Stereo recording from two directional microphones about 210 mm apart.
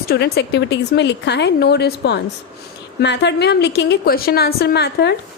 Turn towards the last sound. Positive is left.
turn(degrees=50)  # may be behind; listen again after turning